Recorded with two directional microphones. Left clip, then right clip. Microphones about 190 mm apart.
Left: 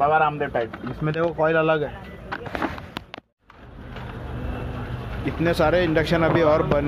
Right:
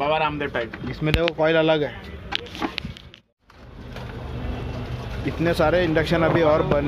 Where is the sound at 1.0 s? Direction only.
Centre (ahead or behind).